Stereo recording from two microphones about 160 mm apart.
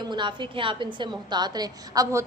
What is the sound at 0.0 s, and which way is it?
A woman's voice, 30° right (ahead or behind).